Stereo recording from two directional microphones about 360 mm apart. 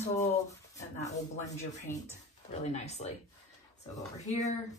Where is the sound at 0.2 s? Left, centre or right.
Centre.